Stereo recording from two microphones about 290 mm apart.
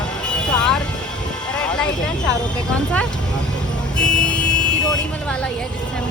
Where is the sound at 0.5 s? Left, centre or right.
Centre.